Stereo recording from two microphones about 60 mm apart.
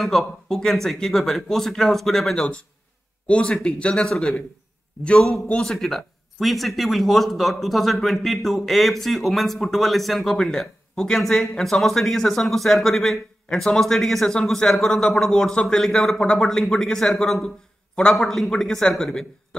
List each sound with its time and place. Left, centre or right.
0.0 s speech: centre
2.3 s a man's voice: centre
5.5 s a man's voice: centre